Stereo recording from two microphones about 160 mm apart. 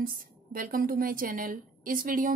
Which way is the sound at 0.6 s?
60° right (ahead or behind).